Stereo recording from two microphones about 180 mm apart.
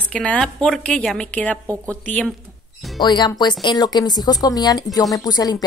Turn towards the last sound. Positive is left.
turn(degrees=20)  # may be behind; listen again after turning